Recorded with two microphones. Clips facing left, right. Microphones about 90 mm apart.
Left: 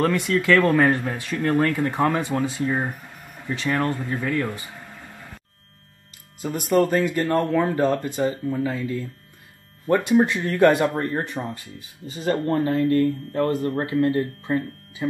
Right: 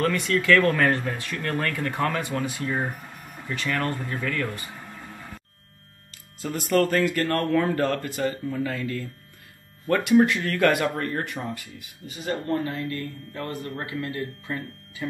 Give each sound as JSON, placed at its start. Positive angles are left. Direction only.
{"t": 0.0, "sound": "speech", "side_deg": 20}
{"t": 6.7, "sound": "speech", "side_deg": 20}